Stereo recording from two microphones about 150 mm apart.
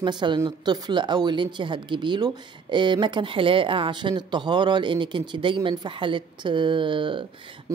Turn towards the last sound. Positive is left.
turn(degrees=-35)  # may be behind; listen again after turning